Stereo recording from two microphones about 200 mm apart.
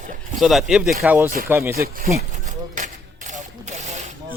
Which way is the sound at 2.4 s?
40° right (ahead or behind).